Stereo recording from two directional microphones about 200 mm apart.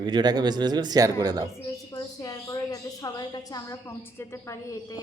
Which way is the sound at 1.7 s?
15° left (ahead or behind).